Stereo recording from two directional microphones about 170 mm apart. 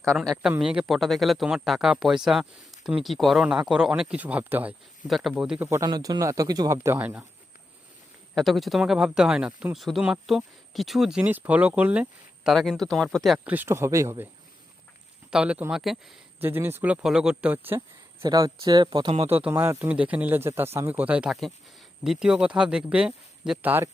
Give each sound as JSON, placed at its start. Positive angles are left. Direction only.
{"t": 0.2, "sound": "speech", "side_deg": 0}
{"t": 5.6, "sound": "speech", "side_deg": -20}
{"t": 8.4, "sound": "speech", "side_deg": 0}
{"t": 15.3, "sound": "speech", "side_deg": -5}
{"t": 16.4, "sound": "speech", "side_deg": -15}
{"t": 17.7, "sound": "speech", "side_deg": -25}
{"t": 19.3, "sound": "speech", "side_deg": -10}